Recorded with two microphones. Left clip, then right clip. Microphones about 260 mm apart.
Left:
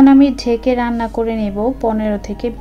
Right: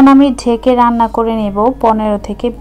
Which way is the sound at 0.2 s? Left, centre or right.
Centre.